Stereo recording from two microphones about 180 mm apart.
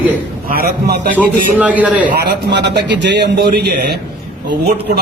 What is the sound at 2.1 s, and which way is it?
A man's voice, 70° right (ahead or behind).